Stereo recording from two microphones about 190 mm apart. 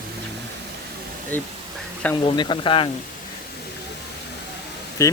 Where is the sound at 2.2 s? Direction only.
25° left (ahead or behind).